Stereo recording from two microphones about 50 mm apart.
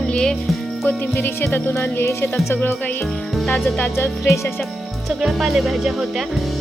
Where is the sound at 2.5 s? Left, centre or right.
Left.